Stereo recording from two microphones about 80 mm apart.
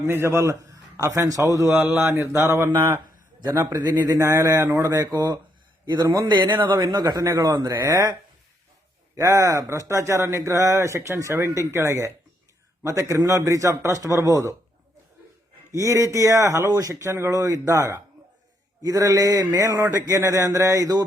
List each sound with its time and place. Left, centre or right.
0.0 s speech: right
1.7 s speech: right
3.8 s a sound: right
4.2 s speech: right
4.9 s speech: right
6.2 s speech: right
7.7 s a sound: right
9.1 s speech: right
15.7 s speech: right
16.6 s a sound: right
16.9 s speech: right
18.8 s a sound: right